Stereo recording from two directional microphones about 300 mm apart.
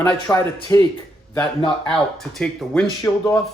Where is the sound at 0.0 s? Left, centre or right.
Centre.